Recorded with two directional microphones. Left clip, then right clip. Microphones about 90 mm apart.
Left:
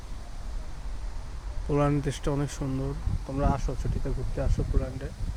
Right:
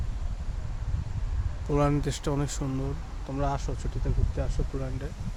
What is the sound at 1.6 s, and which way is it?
Speech, 15° right (ahead or behind).